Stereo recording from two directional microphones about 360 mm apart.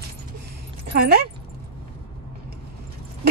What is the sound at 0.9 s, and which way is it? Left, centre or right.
Speech, right.